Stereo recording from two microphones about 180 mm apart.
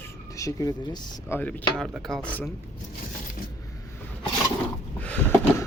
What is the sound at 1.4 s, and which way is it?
Speech, 10° left (ahead or behind).